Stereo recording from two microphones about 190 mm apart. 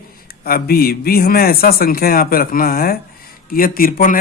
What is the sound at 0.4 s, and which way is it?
Speech, 50° left (ahead or behind).